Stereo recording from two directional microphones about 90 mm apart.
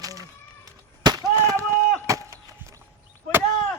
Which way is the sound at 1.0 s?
50° right (ahead or behind).